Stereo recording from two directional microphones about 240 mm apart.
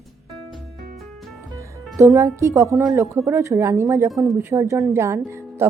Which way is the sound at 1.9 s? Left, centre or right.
Centre.